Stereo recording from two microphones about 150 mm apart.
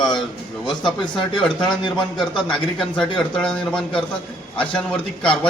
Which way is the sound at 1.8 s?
30° left (ahead or behind).